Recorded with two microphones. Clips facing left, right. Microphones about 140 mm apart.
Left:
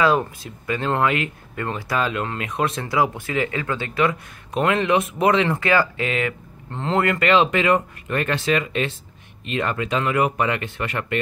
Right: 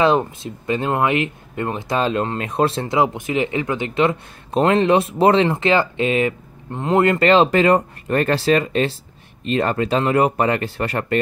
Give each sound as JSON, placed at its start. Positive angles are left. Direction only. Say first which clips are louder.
{"t": 0.0, "sound": "speech", "louder": "right 3 dB", "side_deg": -25}